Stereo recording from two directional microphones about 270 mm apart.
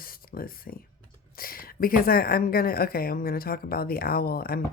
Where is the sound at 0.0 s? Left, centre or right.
Left.